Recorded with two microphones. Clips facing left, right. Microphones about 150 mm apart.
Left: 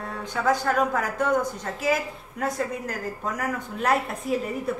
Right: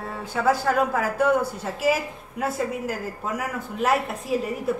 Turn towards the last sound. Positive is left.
turn(degrees=0)  # may be behind; listen again after turning